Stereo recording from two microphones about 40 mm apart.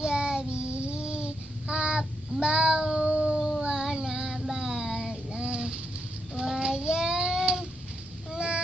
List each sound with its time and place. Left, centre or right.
0.0 s child singing: right
2.8 s howl: right
3.3 s howl: centre
3.6 s child singing: centre
8.3 s a sound: right